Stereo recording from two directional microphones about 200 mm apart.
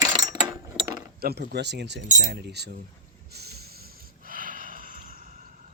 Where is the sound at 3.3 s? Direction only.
55° right (ahead or behind).